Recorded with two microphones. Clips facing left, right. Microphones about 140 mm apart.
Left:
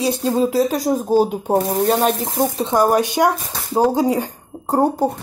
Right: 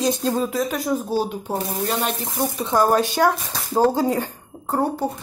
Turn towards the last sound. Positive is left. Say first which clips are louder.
# left 5 dB
turn(degrees=40)  # may be behind; listen again after turning